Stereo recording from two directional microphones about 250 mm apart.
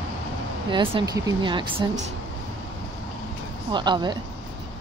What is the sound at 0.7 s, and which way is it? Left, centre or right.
Speech, centre.